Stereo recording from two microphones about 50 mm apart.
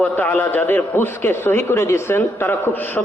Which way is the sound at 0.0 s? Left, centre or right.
Left.